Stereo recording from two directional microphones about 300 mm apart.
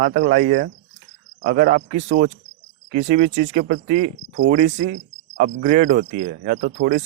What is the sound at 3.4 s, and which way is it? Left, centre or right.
Speech, right.